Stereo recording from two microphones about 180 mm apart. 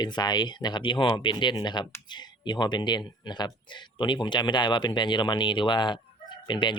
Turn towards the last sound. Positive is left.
turn(degrees=25)  # may be behind; listen again after turning